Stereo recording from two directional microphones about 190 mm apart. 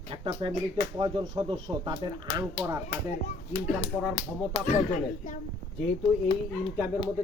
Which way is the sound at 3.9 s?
10° right (ahead or behind).